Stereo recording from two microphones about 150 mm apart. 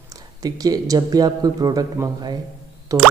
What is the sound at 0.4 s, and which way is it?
A man's voice, 25° right (ahead or behind).